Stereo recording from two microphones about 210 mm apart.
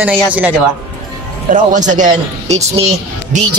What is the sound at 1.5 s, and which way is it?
A man's voice, 35° right (ahead or behind).